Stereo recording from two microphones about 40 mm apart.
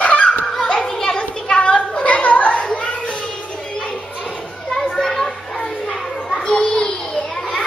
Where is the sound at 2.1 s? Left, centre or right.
Left.